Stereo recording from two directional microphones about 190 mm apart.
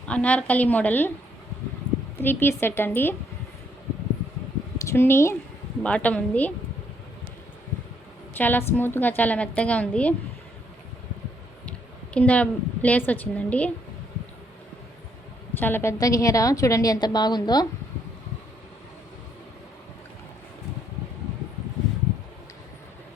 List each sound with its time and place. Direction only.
0.0 s a woman's voice: 5° left (ahead or behind)
2.1 s a woman's voice: 10° left (ahead or behind)
4.8 s a woman's voice: 15° left (ahead or behind)
8.3 s a woman's voice: 10° left (ahead or behind)
12.1 s a woman's voice: 5° left (ahead or behind)
15.5 s a woman's voice: 10° left (ahead or behind)